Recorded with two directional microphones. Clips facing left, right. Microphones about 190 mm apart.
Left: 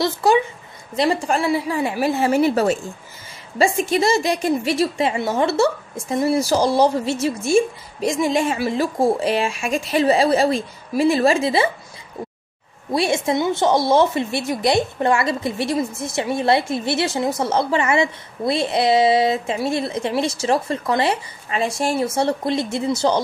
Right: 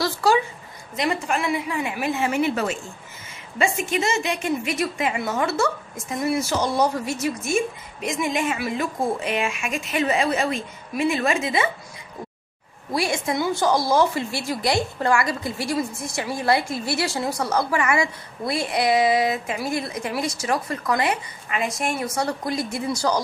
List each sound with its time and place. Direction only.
0.0 s a sound: 20° left (ahead or behind)
0.9 s a woman's voice: 30° left (ahead or behind)
12.9 s speech: 25° left (ahead or behind)